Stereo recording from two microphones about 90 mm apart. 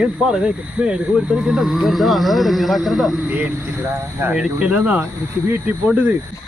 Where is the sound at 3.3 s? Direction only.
25° right (ahead or behind).